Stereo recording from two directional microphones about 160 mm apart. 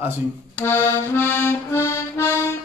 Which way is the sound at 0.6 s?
15° left (ahead or behind).